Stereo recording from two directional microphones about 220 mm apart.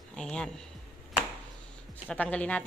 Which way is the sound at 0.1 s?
5° left (ahead or behind).